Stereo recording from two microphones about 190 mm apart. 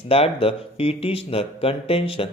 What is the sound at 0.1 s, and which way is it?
Speech, 30° left (ahead or behind).